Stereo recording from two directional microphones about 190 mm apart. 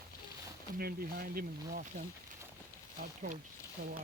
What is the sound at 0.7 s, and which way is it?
Speech, 50° right (ahead or behind).